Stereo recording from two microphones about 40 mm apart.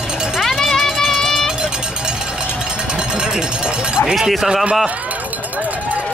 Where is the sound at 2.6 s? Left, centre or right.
Right.